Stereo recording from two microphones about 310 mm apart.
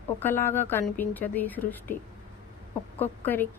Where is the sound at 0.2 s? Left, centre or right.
Centre.